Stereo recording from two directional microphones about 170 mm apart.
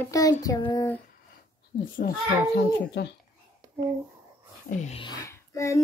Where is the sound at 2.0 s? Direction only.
55° left (ahead or behind).